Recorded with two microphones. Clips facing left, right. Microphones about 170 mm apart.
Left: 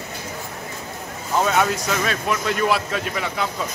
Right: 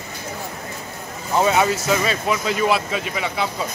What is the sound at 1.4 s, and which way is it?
Speech, 5° right (ahead or behind).